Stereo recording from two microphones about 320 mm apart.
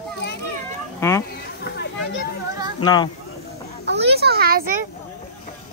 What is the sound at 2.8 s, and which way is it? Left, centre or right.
Speech, centre.